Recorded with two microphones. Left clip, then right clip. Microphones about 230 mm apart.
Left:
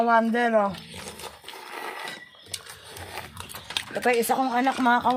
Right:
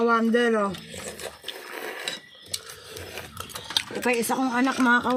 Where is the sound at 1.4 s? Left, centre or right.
Centre.